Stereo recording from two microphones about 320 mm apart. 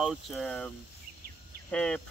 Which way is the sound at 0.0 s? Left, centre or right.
Centre.